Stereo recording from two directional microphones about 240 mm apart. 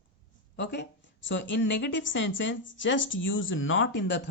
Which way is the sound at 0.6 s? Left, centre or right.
Left.